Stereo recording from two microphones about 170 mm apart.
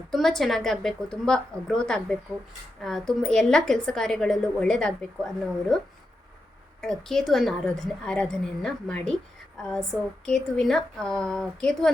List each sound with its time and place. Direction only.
0.1 s a woman's voice: centre (ahead or behind)
6.8 s a woman's voice: 5° left (ahead or behind)